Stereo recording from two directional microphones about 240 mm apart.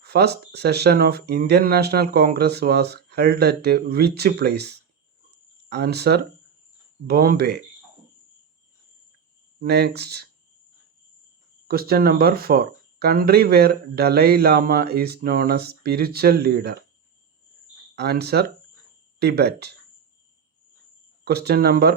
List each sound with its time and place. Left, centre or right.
0.0 s speech: right
9.6 s speech: right
11.7 s speech: right
17.9 s speech: right
21.2 s speech: right